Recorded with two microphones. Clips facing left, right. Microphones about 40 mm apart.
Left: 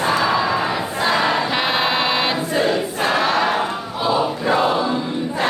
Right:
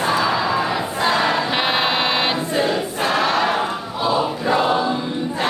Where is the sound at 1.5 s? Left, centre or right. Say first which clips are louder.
Even; centre.